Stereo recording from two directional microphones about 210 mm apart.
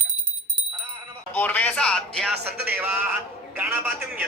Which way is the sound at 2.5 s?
50° right (ahead or behind).